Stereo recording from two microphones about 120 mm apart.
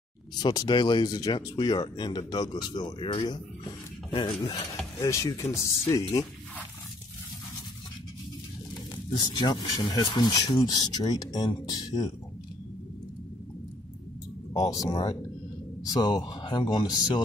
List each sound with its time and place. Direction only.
0.4 s speech: 35° left (ahead or behind)
5.0 s speech: 25° left (ahead or behind)
8.9 s speech: 35° left (ahead or behind)
14.5 s speech: 30° left (ahead or behind)